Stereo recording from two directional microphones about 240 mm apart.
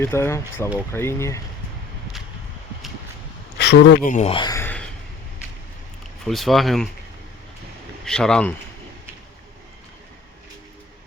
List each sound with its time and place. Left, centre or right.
0.0 s speech: centre
3.6 s speech: left
4.1 s speech: left; by 4.9 s centre
6.2 s speech: centre
8.0 s speech: centre